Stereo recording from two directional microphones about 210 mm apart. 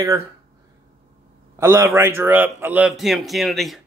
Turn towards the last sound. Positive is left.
turn(degrees=0)  # may be behind; listen again after turning